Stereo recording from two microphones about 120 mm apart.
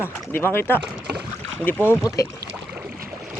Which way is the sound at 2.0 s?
30° left (ahead or behind).